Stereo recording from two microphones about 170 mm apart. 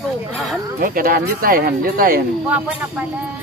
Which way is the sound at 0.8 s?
55° right (ahead or behind).